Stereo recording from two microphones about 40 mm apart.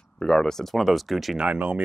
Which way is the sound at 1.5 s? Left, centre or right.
Right.